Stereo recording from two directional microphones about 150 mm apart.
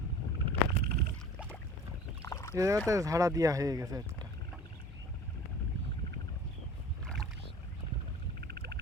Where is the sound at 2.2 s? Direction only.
20° left (ahead or behind).